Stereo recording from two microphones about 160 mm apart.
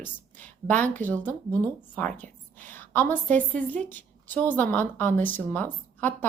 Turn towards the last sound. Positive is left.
turn(degrees=10)  # may be behind; listen again after turning